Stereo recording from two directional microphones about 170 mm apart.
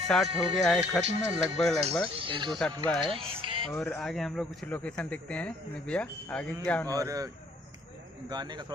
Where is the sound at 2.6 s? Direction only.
5° left (ahead or behind).